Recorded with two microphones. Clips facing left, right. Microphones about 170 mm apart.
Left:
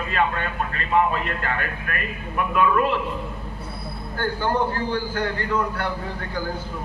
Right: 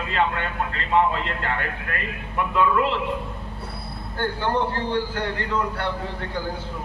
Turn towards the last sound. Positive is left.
turn(degrees=-30)  # may be behind; listen again after turning